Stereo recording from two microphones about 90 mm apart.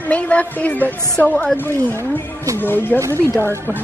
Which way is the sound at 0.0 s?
15° left (ahead or behind).